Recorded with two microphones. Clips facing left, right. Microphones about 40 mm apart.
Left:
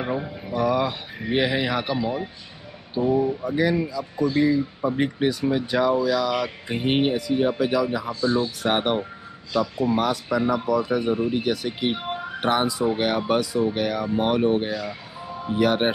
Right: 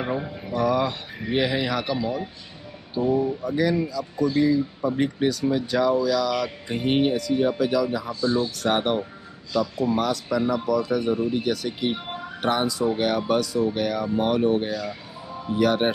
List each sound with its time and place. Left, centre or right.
0.0 s speech: centre
3.4 s speech: centre